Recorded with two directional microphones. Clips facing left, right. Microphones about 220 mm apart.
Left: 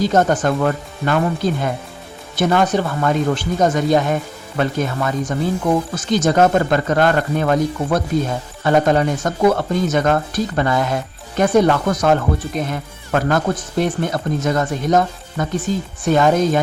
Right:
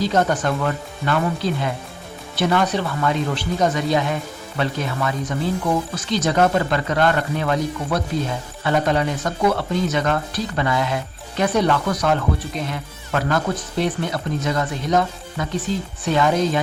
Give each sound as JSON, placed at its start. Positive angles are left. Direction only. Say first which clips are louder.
{"t": 0.0, "sound": "speech", "louder": "left 4 dB", "side_deg": 45}